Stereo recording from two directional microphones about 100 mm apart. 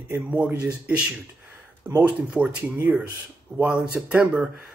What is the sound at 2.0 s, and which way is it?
Speech, 10° right (ahead or behind).